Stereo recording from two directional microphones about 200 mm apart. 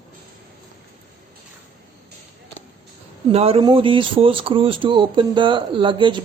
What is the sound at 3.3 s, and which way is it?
Speech, 30° right (ahead or behind).